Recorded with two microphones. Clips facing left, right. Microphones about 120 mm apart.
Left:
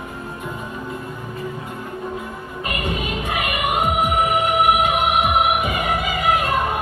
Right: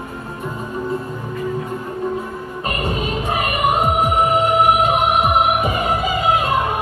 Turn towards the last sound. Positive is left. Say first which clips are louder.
# right 2 dB
turn(degrees=-25)  # may be behind; listen again after turning